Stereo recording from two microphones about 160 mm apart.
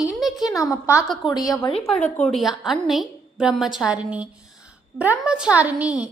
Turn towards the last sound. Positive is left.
turn(degrees=-10)  # may be behind; listen again after turning